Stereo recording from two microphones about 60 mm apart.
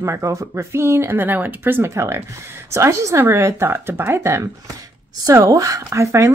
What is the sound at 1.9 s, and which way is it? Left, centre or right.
Speech, right.